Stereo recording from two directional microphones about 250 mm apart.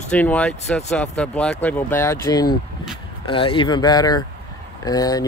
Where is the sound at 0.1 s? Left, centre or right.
Centre.